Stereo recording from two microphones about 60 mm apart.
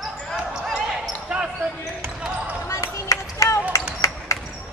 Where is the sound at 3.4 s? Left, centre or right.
Left.